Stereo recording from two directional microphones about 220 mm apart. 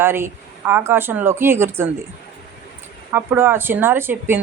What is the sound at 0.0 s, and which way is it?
Speech, 10° right (ahead or behind).